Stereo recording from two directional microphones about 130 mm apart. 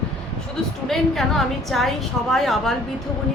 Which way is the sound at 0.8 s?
Centre (ahead or behind).